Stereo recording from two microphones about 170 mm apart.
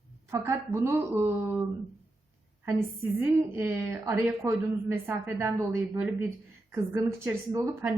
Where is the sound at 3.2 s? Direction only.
15° right (ahead or behind).